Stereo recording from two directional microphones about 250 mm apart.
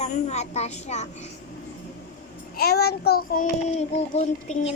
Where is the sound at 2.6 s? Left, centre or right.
Left.